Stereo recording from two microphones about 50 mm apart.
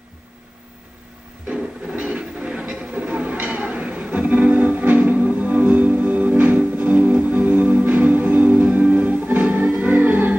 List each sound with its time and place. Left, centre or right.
1.9 s music: right